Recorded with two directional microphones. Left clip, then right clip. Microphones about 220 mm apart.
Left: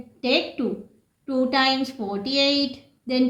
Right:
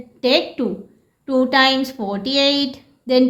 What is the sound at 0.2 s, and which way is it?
A woman's voice, 40° right (ahead or behind).